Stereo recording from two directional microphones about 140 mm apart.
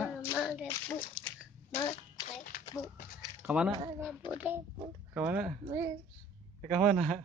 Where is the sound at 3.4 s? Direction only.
10° right (ahead or behind).